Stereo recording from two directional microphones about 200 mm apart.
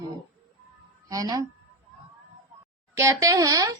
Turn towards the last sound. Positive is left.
turn(degrees=-15)  # may be behind; listen again after turning